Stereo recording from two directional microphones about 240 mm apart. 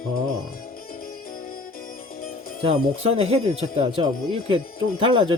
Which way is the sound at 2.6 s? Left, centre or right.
Right.